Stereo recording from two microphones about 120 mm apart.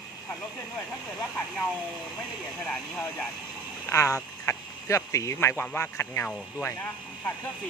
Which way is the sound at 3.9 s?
25° left (ahead or behind).